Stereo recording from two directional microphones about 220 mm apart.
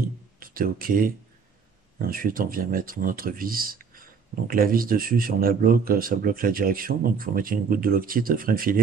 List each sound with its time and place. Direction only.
0.4 s speech: 40° right (ahead or behind)